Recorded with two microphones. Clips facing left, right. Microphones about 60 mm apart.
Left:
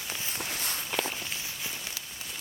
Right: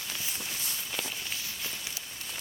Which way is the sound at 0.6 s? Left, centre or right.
Left.